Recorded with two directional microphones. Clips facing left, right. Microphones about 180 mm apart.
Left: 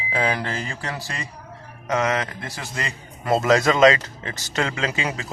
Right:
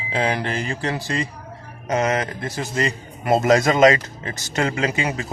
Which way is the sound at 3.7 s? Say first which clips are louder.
Right 1 dB; 40° right (ahead or behind).